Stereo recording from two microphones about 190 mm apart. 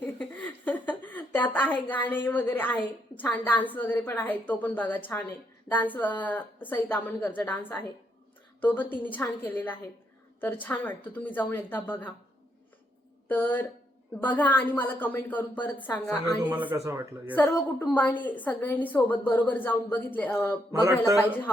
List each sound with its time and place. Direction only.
0.0 s a sound: 5° left (ahead or behind)
4.0 s a woman's voice: 10° left (ahead or behind)
13.2 s a woman's voice: 10° left (ahead or behind)
16.6 s speech: 10° right (ahead or behind)
17.3 s a woman's voice: 10° left (ahead or behind)
20.8 s speech: 15° right (ahead or behind)